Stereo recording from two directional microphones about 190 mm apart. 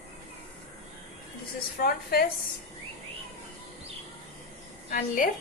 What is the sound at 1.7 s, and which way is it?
Speech, 50° left (ahead or behind).